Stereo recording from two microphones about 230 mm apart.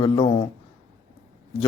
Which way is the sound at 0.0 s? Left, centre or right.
Left.